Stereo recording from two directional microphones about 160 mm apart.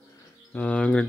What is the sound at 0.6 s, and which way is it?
Speech, 10° left (ahead or behind).